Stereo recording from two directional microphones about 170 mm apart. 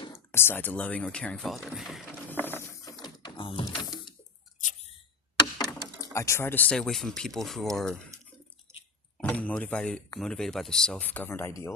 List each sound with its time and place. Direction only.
0.0 s speech: 15° left (ahead or behind); by 2.0 s centre (ahead or behind)
2.3 s mechanisms: 10° left (ahead or behind)
5.4 s speech: 20° left (ahead or behind); by 7.7 s centre (ahead or behind)
9.1 s speech: 10° left (ahead or behind)